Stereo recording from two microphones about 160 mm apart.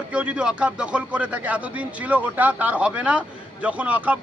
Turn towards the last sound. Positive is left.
turn(degrees=-10)  # may be behind; listen again after turning